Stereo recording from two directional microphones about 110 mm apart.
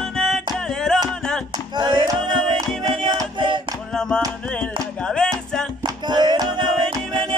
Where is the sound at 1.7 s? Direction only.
45° right (ahead or behind).